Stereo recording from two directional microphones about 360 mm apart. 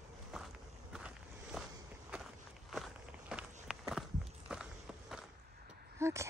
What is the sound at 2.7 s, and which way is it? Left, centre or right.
Walk, centre.